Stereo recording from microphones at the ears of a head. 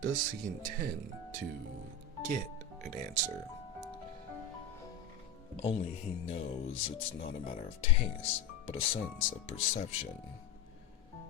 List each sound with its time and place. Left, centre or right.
0.0 s speech: right
2.8 s speech: right
5.8 s speech: left